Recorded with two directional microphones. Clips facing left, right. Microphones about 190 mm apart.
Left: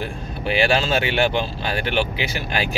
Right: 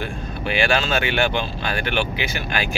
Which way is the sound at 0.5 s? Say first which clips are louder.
Left 2 dB; 30° left (ahead or behind).